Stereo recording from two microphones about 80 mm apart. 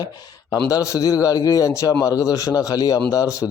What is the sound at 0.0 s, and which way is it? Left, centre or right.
A man's voice, left.